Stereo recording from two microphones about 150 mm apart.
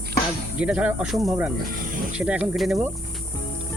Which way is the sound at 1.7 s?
70° right (ahead or behind).